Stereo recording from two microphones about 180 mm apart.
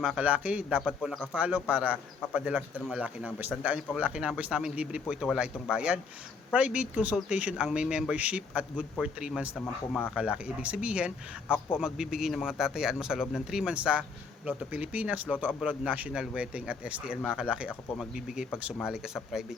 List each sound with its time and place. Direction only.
0.0 s a man's voice: 5° right (ahead or behind)
10.2 s a man's voice: 5° right (ahead or behind)